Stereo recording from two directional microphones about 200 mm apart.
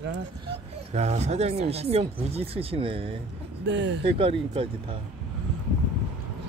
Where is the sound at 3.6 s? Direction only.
65° right (ahead or behind).